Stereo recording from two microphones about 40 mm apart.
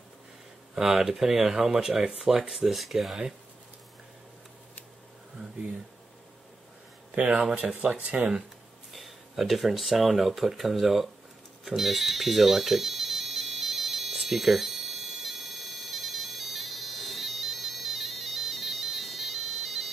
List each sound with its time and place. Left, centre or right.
0.9 s speech: centre
2.1 s speech: centre
7.1 s speech: right
8.9 s speech: centre
11.6 s alarm: centre